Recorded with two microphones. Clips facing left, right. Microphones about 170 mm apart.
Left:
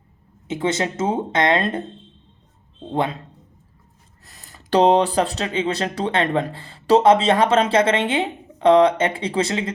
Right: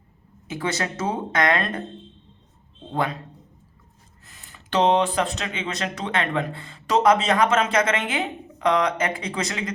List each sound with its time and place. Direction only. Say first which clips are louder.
0.4 s speech: left 5 dB; 25° left (ahead or behind)
2.9 s speech: left 3 dB; 25° left (ahead or behind)
4.3 s speech: left 8 dB; 40° left (ahead or behind)